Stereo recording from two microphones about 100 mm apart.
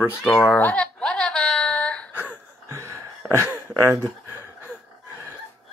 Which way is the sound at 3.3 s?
25° right (ahead or behind).